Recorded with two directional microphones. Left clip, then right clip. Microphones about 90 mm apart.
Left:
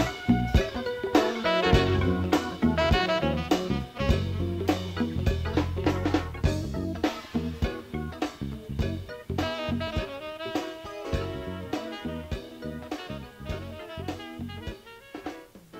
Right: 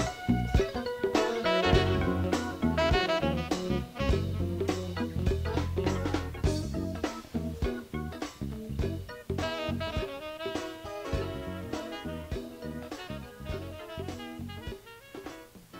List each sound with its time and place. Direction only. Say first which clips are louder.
0.3 s music: left 1 dB; 40° left (ahead or behind)
9.4 s music: left 3 dB; 40° left (ahead or behind)